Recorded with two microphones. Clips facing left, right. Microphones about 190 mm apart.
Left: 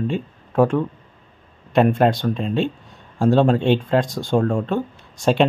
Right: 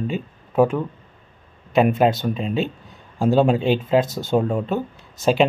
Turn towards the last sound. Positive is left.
turn(degrees=0)  # may be behind; listen again after turning